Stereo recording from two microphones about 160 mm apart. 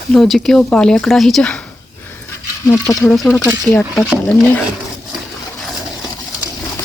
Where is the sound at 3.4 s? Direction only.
20° left (ahead or behind).